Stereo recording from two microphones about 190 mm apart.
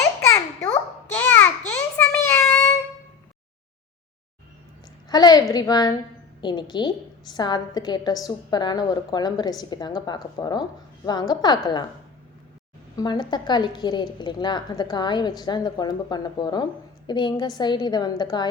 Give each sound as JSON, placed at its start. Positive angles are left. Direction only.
{"t": 1.1, "sound": "a sound", "side_deg": 10}
{"t": 5.0, "sound": "a woman's voice", "side_deg": 20}
{"t": 13.0, "sound": "a woman's voice", "side_deg": 20}